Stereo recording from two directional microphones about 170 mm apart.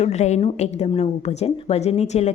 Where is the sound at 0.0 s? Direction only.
40° left (ahead or behind).